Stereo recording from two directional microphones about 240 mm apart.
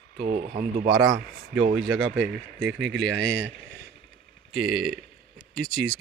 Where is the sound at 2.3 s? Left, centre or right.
Right.